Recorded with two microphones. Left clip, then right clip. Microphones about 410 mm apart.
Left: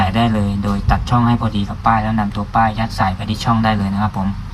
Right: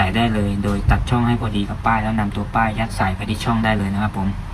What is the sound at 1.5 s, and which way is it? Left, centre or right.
Speech, centre.